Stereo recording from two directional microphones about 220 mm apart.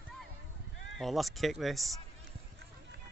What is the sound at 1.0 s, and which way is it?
Speech, centre (ahead or behind).